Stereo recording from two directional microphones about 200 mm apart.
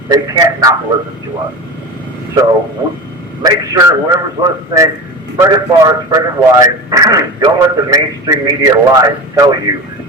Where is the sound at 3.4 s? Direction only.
20° right (ahead or behind).